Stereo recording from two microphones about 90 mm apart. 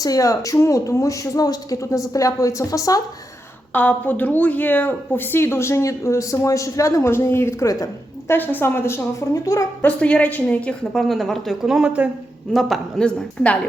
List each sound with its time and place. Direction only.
0.0 s a woman's voice: 40° left (ahead or behind)
3.7 s speech: 20° left (ahead or behind); by 7.9 s 35° left (ahead or behind)
8.3 s speech: 25° left (ahead or behind)
9.3 s a woman's voice: 40° left (ahead or behind)
9.8 s a woman's voice: 15° left (ahead or behind)
10.9 s a woman's voice: centre (ahead or behind)